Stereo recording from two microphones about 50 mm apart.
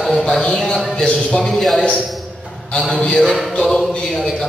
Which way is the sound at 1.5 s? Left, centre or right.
Centre.